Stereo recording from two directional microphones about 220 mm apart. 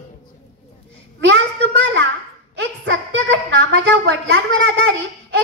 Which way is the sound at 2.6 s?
55° right (ahead or behind).